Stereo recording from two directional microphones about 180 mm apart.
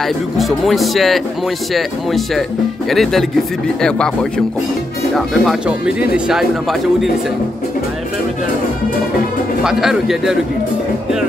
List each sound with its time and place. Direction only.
0.0 s speech: centre (ahead or behind)
9.6 s speech: centre (ahead or behind)